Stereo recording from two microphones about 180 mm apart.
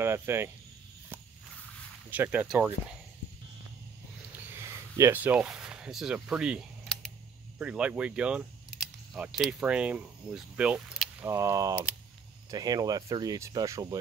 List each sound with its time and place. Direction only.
0.0 s speech: 15° right (ahead or behind)
2.0 s speech: 10° right (ahead or behind)
4.3 s a sound: 15° right (ahead or behind); by 7.1 s centre (ahead or behind)
7.5 s speech: 5° right (ahead or behind)
11.2 s speech: 15° right (ahead or behind)